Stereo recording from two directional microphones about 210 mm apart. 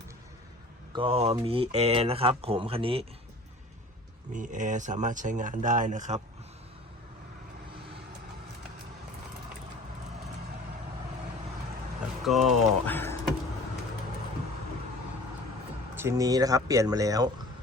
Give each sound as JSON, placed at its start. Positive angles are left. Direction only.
{"t": 0.9, "sound": "speech", "side_deg": -25}
{"t": 4.3, "sound": "speech", "side_deg": -35}
{"t": 12.2, "sound": "speech", "side_deg": 0}
{"t": 16.0, "sound": "speech", "side_deg": -15}